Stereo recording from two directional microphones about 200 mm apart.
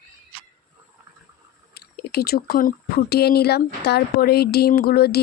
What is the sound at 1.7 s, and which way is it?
Speech, 50° left (ahead or behind).